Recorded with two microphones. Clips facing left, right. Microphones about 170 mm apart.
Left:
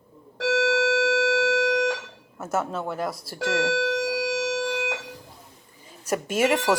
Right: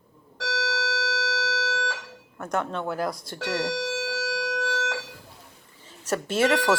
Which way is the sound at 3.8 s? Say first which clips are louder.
Left 5 dB; 55° left (ahead or behind).